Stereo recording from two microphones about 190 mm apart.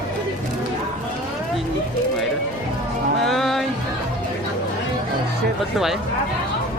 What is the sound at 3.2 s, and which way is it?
Music, centre (ahead or behind).